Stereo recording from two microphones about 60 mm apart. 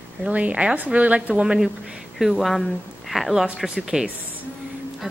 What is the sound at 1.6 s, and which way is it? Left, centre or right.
Speech, centre.